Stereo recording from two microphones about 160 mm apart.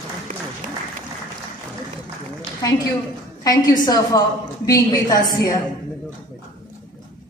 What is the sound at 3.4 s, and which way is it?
A woman's voice, 25° left (ahead or behind).